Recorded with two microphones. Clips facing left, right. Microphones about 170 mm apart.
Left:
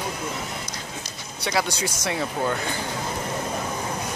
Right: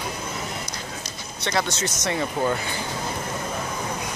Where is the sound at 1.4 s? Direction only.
10° left (ahead or behind).